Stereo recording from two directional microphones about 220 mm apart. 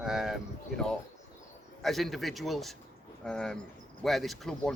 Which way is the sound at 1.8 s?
Centre (ahead or behind).